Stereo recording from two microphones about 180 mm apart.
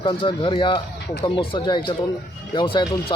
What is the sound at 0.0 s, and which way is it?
Speech, 25° left (ahead or behind).